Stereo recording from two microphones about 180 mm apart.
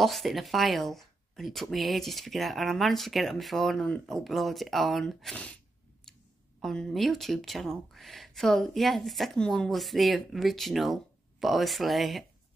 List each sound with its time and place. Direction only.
0.0 s speech: centre (ahead or behind)
6.6 s speech: centre (ahead or behind)